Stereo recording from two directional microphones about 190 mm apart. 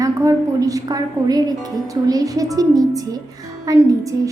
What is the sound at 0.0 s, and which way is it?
A woman's voice, 15° right (ahead or behind).